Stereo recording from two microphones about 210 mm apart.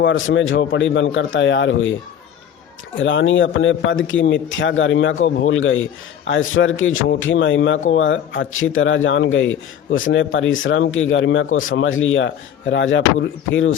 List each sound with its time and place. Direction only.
0.0 s speech: 65° left (ahead or behind)
3.0 s a man's voice: 60° left (ahead or behind)